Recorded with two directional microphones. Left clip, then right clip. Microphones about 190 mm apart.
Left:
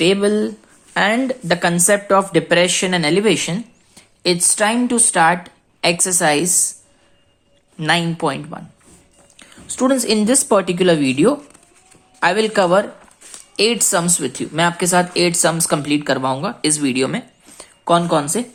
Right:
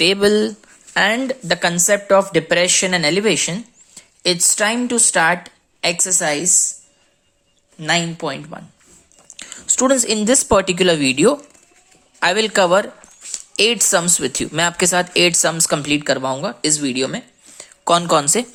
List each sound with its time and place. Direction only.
0.0 s a woman's voice: 25° right (ahead or behind); by 6.7 s centre (ahead or behind)
7.8 s a woman's voice: centre (ahead or behind)
9.3 s a woman's voice: 25° right (ahead or behind); by 17.2 s 10° right (ahead or behind)
17.8 s speech: 30° right (ahead or behind)